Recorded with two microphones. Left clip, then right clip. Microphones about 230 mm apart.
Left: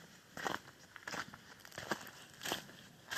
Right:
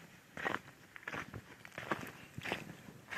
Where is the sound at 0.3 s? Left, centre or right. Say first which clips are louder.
Right 2 dB; left.